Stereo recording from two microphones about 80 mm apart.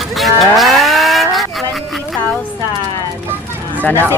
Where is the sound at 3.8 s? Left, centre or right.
Left.